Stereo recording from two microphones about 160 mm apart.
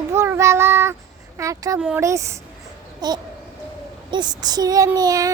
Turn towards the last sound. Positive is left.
turn(degrees=-25)  # may be behind; listen again after turning